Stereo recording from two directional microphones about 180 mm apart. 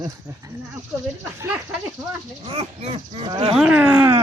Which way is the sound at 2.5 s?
35° right (ahead or behind).